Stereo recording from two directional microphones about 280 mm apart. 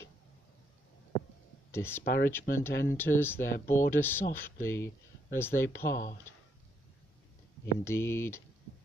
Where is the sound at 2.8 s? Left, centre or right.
Centre.